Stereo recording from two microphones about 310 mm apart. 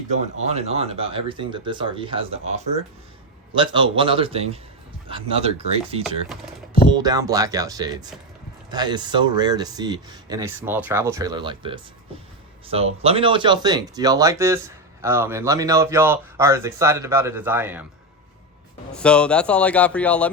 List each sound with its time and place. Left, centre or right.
0.4 s speech: right
3.5 s speech: centre
18.9 s speech: centre